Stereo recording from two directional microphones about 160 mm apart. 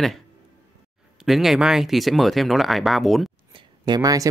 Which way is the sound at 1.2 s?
Centre (ahead or behind).